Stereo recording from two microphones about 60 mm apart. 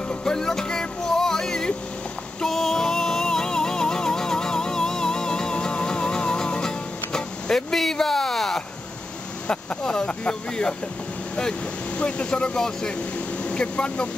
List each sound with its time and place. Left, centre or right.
0.2 s music: centre
9.5 s speech: centre
12.0 s speech: centre